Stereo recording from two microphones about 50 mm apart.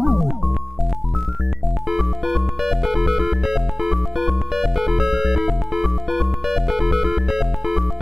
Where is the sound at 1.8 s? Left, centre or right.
Centre.